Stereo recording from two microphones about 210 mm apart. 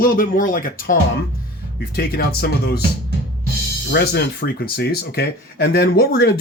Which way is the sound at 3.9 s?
50° left (ahead or behind).